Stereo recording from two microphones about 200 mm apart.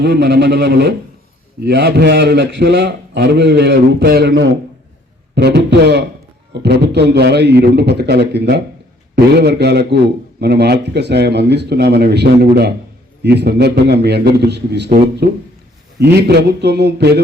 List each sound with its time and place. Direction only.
0.0 s a man's voice: 55° right (ahead or behind)
1.6 s a man's voice: 55° right (ahead or behind)
16.0 s a man's voice: 55° right (ahead or behind)